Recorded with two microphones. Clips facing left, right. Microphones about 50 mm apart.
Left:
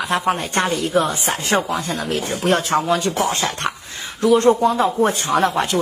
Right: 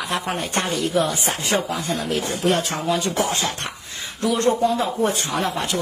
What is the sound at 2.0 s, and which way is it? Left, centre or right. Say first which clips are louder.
Speech: left 2 dB; left.